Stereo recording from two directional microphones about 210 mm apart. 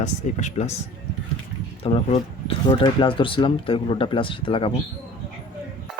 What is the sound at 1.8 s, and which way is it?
Speech, 25° left (ahead or behind).